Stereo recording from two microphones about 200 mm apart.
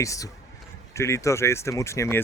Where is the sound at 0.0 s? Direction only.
15° left (ahead or behind).